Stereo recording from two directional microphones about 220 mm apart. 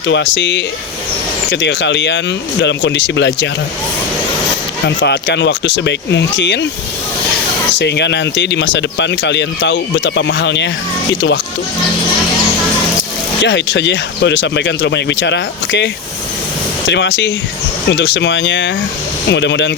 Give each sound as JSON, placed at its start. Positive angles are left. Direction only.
{"t": 0.1, "sound": "speech", "side_deg": 55}
{"t": 4.9, "sound": "speech", "side_deg": 50}
{"t": 7.8, "sound": "speech", "side_deg": 50}
{"t": 13.4, "sound": "speech", "side_deg": 55}